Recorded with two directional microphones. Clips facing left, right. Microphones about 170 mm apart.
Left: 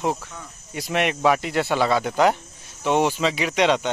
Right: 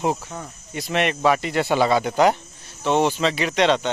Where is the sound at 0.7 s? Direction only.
5° left (ahead or behind).